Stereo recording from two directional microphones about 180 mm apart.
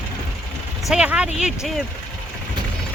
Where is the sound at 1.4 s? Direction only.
Centre (ahead or behind).